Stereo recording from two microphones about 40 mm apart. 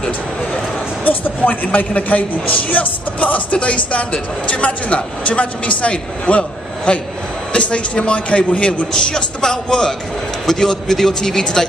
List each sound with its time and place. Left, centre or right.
1.0 s a man's voice: left
8.9 s a man's voice: centre